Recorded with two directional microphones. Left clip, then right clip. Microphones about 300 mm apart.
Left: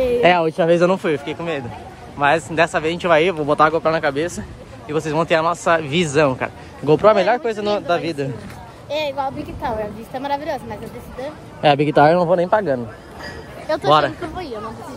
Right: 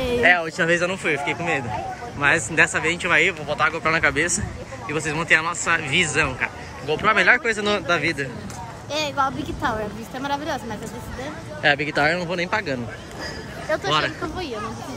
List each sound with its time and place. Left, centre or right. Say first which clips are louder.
0.2 s speech: left 1 dB; left
0.6 s speech: left 5 dB; centre
8.9 s speech: left 1 dB; centre
11.6 s speech: left 5 dB; centre
11.9 s speech: left 8 dB; left
12.4 s a man's voice: left 7 dB; centre
13.8 s speech: left 9 dB; centre